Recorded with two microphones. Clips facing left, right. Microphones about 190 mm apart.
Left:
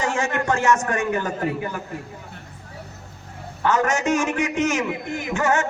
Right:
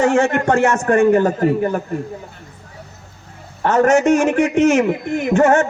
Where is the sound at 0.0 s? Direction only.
60° right (ahead or behind).